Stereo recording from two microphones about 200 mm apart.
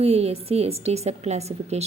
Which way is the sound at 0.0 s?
30° right (ahead or behind).